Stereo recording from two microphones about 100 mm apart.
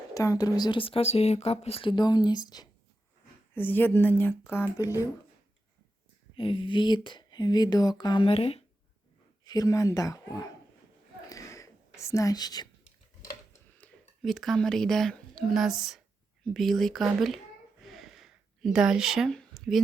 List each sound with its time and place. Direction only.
0.1 s speech: 35° left (ahead or behind)
0.8 s speech: 70° left (ahead or behind)
1.9 s speech: 45° left (ahead or behind)
3.5 s speech: 20° left (ahead or behind)
4.8 s speech: 35° left (ahead or behind)
6.3 s speech: 60° left (ahead or behind); by 8.2 s 45° left (ahead or behind)
8.2 s speech: 70° left (ahead or behind)
9.4 s speech: 40° left (ahead or behind)
11.3 s whispering: 35° left (ahead or behind)
13.8 s a sound: 15° left (ahead or behind)
14.2 s a woman's voice: centre (ahead or behind)
17.8 s a sound: centre (ahead or behind)